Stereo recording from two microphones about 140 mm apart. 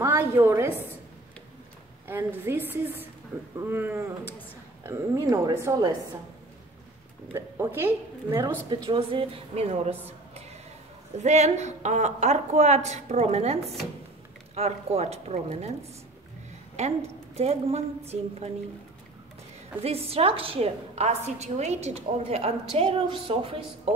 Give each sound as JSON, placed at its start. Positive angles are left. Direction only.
{"t": 0.0, "sound": "a woman's voice", "side_deg": -15}
{"t": 2.0, "sound": "a woman's voice", "side_deg": -15}
{"t": 7.3, "sound": "a woman's voice", "side_deg": -15}
{"t": 8.6, "sound": "a woman's voice", "side_deg": -35}
{"t": 16.7, "sound": "a woman's voice", "side_deg": -50}
{"t": 19.8, "sound": "a woman's voice", "side_deg": -45}